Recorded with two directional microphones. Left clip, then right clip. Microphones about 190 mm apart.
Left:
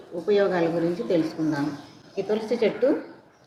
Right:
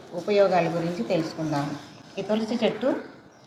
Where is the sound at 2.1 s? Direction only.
30° left (ahead or behind).